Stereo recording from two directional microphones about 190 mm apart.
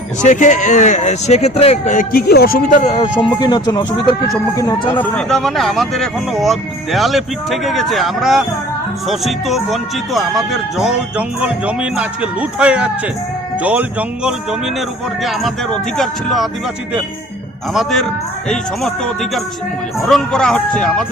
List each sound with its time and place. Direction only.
0.2 s speech: 40° left (ahead or behind)
2.8 s speech: 25° left (ahead or behind)
4.9 s speech: 5° left (ahead or behind)
18.4 s speech: centre (ahead or behind)